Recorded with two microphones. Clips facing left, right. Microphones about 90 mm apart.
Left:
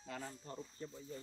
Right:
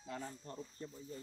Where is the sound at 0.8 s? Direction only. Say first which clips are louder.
Left 1 dB; 25° left (ahead or behind).